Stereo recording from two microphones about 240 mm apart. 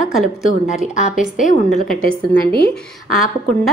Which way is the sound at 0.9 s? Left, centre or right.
Left.